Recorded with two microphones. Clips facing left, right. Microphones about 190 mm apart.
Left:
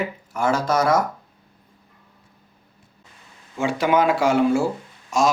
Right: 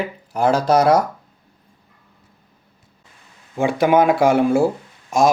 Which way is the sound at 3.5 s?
55° right (ahead or behind).